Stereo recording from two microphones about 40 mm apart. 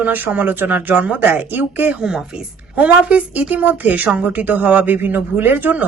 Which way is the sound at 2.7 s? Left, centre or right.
Right.